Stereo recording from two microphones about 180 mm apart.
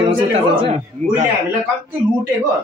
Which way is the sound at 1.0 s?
40° right (ahead or behind).